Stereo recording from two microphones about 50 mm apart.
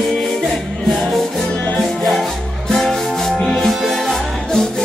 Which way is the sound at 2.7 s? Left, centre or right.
Centre.